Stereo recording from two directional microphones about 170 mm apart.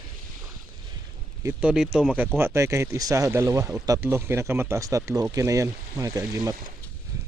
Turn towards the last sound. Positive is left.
turn(degrees=-20)  # may be behind; listen again after turning